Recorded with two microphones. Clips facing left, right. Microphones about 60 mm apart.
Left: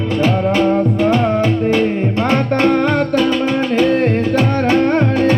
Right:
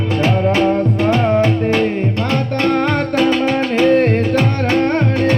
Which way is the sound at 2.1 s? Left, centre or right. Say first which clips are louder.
Left 3 dB; left.